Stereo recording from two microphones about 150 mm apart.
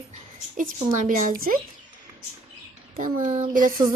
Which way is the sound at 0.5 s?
60° right (ahead or behind).